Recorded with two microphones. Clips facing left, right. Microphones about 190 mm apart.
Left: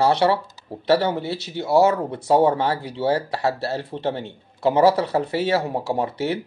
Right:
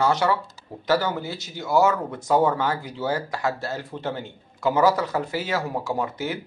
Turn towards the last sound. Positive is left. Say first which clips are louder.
# left 4 dB
turn(degrees=30)  # may be behind; listen again after turning